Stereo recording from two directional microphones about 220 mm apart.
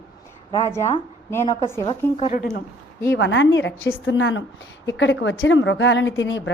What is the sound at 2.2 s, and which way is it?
Speech, 35° left (ahead or behind).